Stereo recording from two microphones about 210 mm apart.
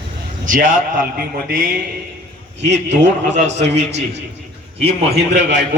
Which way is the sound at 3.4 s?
30° right (ahead or behind).